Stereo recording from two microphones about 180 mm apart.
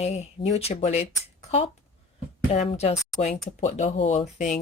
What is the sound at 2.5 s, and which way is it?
Speech, 35° left (ahead or behind).